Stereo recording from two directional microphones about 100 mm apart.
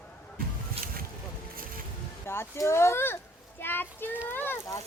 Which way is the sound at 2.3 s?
25° left (ahead or behind).